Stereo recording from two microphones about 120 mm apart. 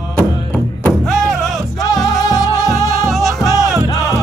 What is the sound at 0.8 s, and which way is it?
Music, 5° left (ahead or behind).